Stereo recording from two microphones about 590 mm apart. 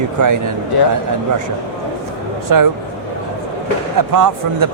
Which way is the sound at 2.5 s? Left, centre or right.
Right.